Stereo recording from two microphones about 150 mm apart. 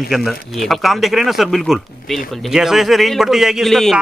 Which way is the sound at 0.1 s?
Centre (ahead or behind).